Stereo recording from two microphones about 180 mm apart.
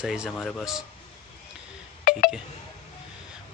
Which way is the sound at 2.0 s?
50° left (ahead or behind).